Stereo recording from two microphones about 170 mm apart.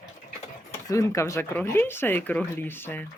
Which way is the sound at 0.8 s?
20° left (ahead or behind).